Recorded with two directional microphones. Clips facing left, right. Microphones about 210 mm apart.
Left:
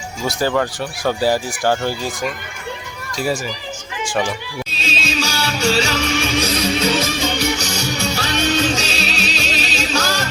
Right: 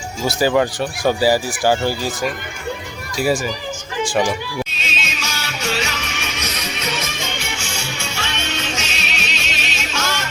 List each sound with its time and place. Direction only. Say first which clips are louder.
0.3 s speech: right 2 dB; 10° right (ahead or behind)
4.0 s speech: right 2 dB; 10° right (ahead or behind)
4.7 s music: left 6 dB; 30° left (ahead or behind)